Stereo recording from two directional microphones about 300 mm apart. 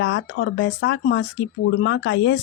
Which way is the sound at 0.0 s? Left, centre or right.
Left.